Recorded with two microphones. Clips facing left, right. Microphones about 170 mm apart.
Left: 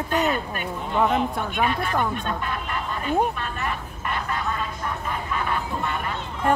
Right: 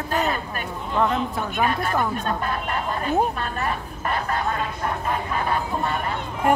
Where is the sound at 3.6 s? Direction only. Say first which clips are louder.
Right 3 dB; 40° right (ahead or behind).